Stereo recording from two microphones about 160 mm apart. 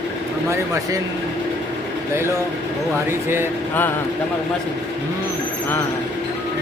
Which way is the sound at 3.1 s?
15° right (ahead or behind).